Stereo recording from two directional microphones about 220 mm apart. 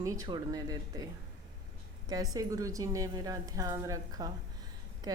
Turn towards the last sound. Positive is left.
turn(degrees=-15)  # may be behind; listen again after turning